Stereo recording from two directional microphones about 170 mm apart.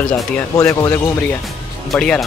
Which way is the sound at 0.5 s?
20° left (ahead or behind).